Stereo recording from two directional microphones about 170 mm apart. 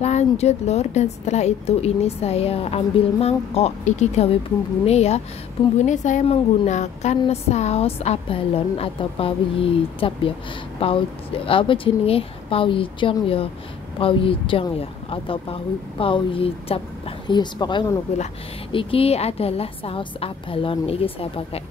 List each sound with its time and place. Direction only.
0.0 s a woman's voice: 40° left (ahead or behind)